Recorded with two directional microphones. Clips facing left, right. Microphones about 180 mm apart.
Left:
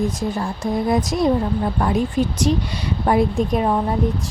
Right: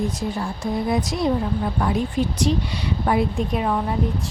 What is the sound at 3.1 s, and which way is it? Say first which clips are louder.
Speech: left 4 dB; 45° left (ahead or behind).